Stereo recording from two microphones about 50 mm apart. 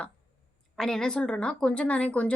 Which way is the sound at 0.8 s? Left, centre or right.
Centre.